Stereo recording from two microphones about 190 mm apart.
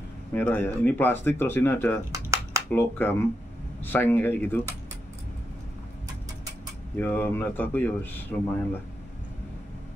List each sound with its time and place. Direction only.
0.3 s speech: 10° left (ahead or behind)
2.1 s a sound: 15° right (ahead or behind)
2.7 s speech: 10° left (ahead or behind)
7.0 s speech: 10° left (ahead or behind)